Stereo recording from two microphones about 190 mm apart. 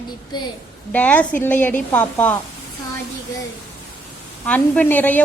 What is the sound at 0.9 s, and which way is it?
A woman's voice, 10° left (ahead or behind).